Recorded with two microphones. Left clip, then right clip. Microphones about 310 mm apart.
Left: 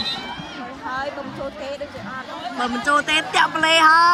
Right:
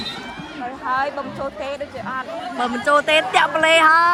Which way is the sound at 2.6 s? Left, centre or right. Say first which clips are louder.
Right 2 dB; centre.